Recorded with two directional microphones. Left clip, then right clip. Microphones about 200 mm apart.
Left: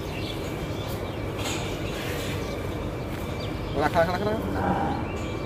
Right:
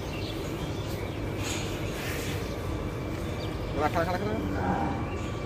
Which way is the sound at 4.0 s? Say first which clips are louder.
Left 9 dB; 55° left (ahead or behind).